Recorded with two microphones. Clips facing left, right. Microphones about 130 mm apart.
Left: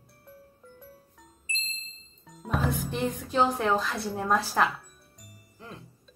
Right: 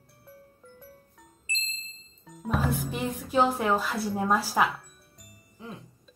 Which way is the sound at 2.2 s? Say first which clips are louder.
Right 1 dB; centre (ahead or behind).